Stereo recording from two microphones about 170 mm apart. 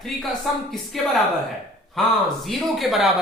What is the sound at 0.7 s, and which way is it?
A woman's voice, centre (ahead or behind).